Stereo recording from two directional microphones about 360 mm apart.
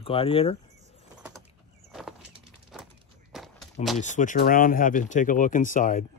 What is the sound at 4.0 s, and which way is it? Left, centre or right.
Speech, left.